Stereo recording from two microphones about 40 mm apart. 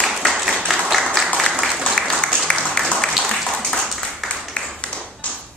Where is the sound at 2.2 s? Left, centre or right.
Left.